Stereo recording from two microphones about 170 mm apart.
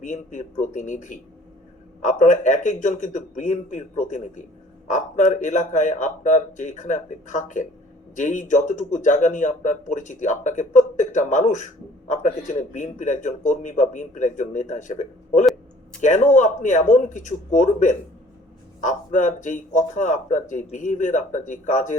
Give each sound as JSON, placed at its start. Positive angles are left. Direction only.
{"t": 0.0, "sound": "speech", "side_deg": 45}